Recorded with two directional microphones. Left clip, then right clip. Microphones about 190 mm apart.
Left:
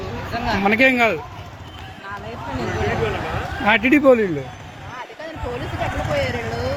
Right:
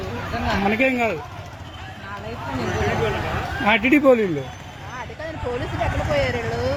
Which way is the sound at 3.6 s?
5° right (ahead or behind).